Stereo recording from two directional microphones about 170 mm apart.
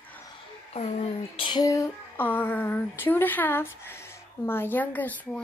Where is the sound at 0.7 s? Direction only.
40° left (ahead or behind).